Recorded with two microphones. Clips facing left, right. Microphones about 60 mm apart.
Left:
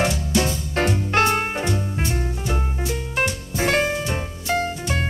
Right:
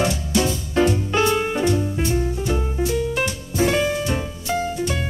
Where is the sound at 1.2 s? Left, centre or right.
Left.